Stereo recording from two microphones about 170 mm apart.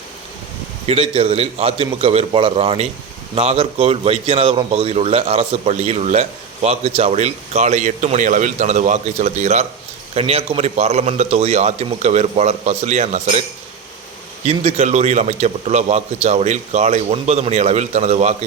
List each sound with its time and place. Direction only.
0.9 s a man's voice: 30° right (ahead or behind)
14.4 s a man's voice: 40° right (ahead or behind)